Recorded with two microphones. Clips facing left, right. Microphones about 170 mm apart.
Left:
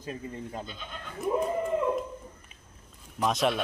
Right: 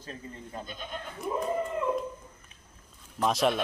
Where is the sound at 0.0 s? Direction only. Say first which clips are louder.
Left 5 dB; 15° left (ahead or behind).